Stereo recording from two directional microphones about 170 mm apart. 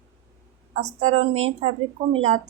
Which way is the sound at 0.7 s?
40° right (ahead or behind).